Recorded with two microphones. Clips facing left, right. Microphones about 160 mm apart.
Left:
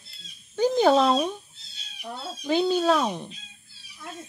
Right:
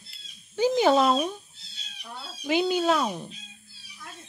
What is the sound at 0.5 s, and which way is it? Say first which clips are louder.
Speech: left 1 dB; 10° right (ahead or behind).